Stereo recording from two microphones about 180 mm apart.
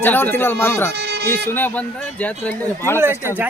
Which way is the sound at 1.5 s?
10° left (ahead or behind).